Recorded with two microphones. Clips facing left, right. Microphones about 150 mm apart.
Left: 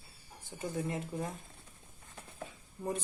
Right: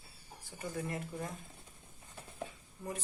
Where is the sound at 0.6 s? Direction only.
20° left (ahead or behind).